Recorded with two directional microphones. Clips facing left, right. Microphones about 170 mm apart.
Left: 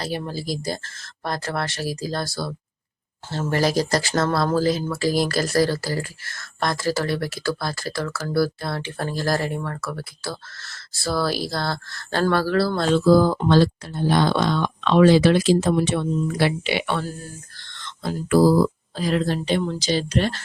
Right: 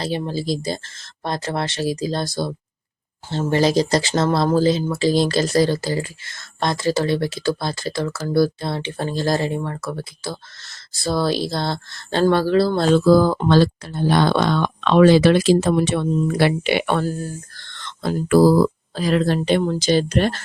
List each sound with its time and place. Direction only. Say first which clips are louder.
0.3 s speech: right 4 dB; 25° right (ahead or behind)
13.1 s speech: left 1 dB; 85° right; by 17.2 s 50° right (ahead or behind)
17.7 s speech: right 5 dB; 65° right (ahead or behind)